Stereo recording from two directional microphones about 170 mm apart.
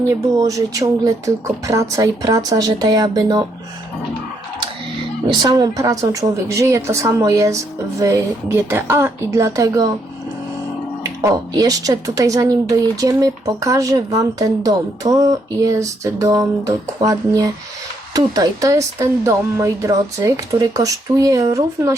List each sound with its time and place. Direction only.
0.1 s a woman's voice: 20° right (ahead or behind)
5.3 s a woman's voice: 25° right (ahead or behind)
11.0 s a woman's voice: 20° right (ahead or behind)